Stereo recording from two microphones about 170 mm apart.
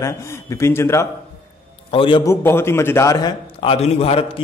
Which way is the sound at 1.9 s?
30° left (ahead or behind).